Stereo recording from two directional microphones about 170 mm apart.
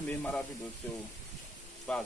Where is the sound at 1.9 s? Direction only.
5° left (ahead or behind).